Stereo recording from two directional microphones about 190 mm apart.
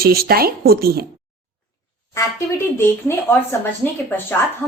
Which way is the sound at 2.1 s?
15° left (ahead or behind).